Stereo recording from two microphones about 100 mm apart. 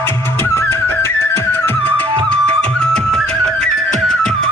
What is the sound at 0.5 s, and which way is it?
Music, 25° left (ahead or behind).